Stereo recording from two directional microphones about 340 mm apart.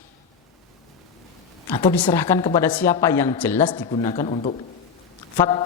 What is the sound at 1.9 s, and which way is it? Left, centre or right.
Speech, centre.